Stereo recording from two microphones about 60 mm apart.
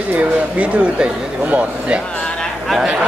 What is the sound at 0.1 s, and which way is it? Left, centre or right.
Speech, right.